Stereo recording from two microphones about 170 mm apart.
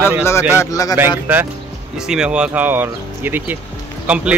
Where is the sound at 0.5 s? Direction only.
15° left (ahead or behind).